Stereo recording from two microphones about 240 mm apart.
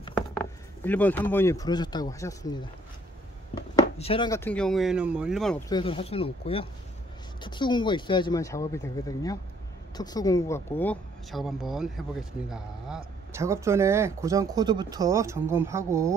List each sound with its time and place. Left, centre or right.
0.4 s speech: centre
3.7 s speech: left; by 5.6 s centre
5.7 s speech: left; by 16.2 s centre